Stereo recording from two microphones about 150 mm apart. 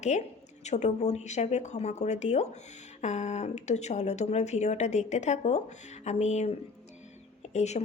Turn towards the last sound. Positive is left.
turn(degrees=50)  # may be behind; listen again after turning